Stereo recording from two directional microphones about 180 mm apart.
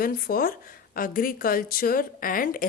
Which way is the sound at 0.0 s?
55° left (ahead or behind).